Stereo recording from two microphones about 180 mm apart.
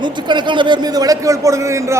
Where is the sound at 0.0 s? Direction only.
25° right (ahead or behind).